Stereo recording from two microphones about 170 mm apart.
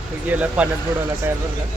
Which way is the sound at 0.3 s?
10° right (ahead or behind).